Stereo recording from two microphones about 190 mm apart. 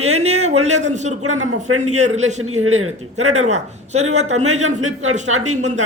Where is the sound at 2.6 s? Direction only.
90° right.